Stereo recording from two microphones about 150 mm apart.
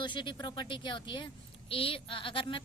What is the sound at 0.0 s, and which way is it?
A woman's voice, 30° left (ahead or behind).